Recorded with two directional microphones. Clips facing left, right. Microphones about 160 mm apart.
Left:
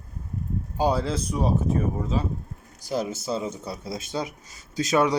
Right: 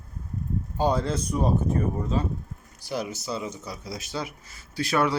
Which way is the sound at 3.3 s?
30° left (ahead or behind).